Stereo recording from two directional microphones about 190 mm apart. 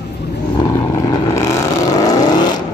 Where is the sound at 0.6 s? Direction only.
20° left (ahead or behind).